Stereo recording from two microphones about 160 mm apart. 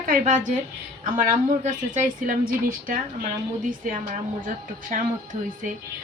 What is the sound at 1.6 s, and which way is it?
A woman's voice, 55° right (ahead or behind).